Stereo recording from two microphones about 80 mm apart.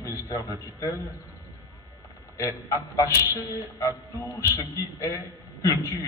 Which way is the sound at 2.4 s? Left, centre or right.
Left.